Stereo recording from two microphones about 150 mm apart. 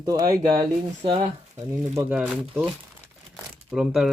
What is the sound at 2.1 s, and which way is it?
Speech, 5° right (ahead or behind).